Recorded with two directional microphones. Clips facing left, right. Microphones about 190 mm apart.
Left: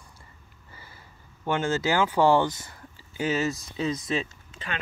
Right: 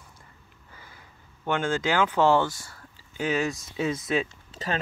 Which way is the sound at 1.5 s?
5° left (ahead or behind).